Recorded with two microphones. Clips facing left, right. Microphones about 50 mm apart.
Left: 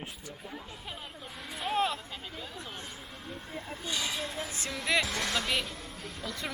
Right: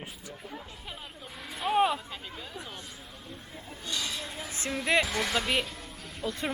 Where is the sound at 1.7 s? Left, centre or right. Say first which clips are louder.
Right 5 dB; centre.